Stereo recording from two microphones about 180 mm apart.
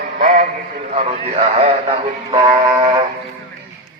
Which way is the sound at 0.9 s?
35° right (ahead or behind).